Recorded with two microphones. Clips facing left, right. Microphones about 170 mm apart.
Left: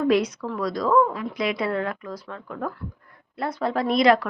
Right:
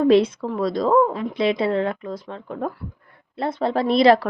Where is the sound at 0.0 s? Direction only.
25° right (ahead or behind).